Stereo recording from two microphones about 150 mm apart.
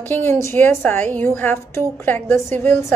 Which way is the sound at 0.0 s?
15° left (ahead or behind).